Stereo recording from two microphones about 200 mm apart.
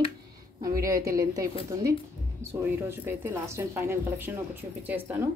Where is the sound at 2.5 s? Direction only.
10° right (ahead or behind).